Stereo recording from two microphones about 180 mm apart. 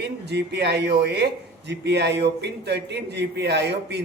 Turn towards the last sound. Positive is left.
turn(degrees=-70)  # may be behind; listen again after turning